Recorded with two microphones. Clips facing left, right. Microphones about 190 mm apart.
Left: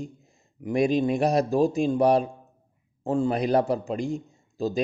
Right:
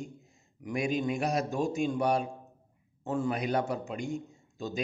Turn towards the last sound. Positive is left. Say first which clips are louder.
# left 9 dB
turn(degrees=35)  # may be behind; listen again after turning